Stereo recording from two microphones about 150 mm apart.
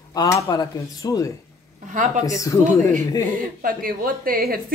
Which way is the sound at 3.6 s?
70° right (ahead or behind).